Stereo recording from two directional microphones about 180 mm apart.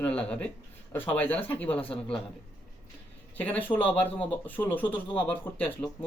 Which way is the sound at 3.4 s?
10° left (ahead or behind).